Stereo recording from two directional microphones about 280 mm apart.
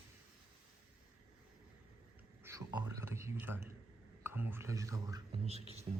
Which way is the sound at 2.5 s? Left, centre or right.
Centre.